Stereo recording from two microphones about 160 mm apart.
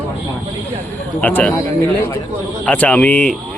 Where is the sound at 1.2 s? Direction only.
10° left (ahead or behind).